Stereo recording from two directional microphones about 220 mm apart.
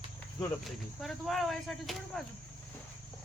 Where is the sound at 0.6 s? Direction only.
Centre (ahead or behind).